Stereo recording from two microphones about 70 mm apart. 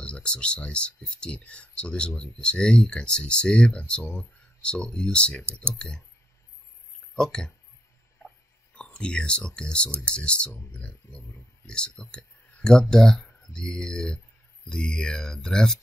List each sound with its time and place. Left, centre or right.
0.0 s speech: centre
4.0 s speech: centre
4.6 s speech: centre
5.4 s speech: right
5.8 s speech: centre
7.2 s speech: centre
8.7 s speech: centre